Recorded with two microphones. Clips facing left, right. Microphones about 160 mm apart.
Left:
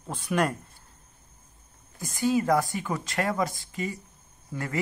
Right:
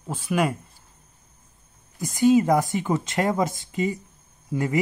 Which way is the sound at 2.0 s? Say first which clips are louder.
Right 7 dB; 20° right (ahead or behind).